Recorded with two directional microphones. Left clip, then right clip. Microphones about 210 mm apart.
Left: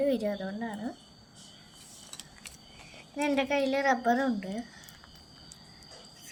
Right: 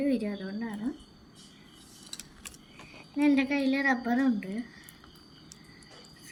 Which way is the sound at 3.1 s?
45° left (ahead or behind).